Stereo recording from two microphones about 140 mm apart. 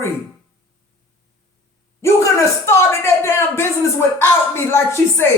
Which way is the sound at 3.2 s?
20° left (ahead or behind).